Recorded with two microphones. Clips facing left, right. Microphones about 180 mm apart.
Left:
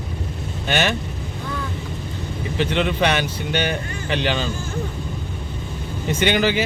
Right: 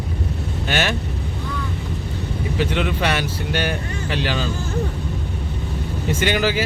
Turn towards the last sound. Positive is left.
turn(degrees=-5)  # may be behind; listen again after turning